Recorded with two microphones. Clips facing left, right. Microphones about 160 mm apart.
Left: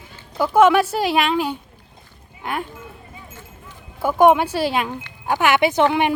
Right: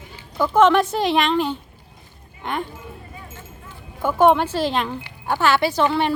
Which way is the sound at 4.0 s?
10° left (ahead or behind).